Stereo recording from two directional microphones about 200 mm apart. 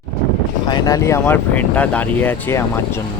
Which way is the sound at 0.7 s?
20° left (ahead or behind).